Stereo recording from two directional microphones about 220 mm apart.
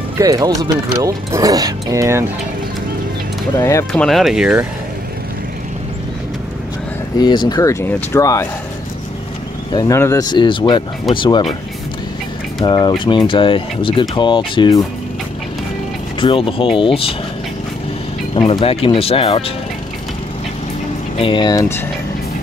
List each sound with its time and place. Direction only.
0.2 s speech: 15° right (ahead or behind)
3.6 s speech: 15° left (ahead or behind)
4.0 s speech: centre (ahead or behind)
7.2 s speech: 20° left (ahead or behind)
9.7 s speech: 15° left (ahead or behind)
12.6 s speech: 20° left (ahead or behind)
16.2 s speech: 25° left (ahead or behind)
18.3 s speech: 25° left (ahead or behind)
21.2 s speech: 20° left (ahead or behind)